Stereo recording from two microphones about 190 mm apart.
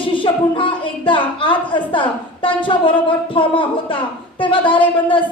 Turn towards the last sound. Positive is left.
turn(degrees=25)  # may be behind; listen again after turning